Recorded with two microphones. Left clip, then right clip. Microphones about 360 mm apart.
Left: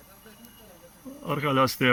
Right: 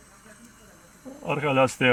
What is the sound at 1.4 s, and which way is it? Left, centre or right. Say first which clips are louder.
Speech: right 2 dB; centre.